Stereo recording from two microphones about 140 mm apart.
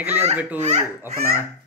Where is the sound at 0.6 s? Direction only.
55° right (ahead or behind).